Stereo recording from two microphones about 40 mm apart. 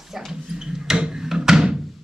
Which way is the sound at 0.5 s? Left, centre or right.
Centre.